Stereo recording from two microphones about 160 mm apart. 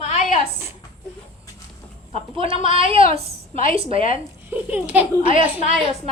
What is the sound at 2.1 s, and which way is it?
A woman's voice, 35° right (ahead or behind).